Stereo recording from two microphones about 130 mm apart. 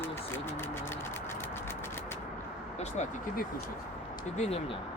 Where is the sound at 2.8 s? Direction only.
65° left (ahead or behind).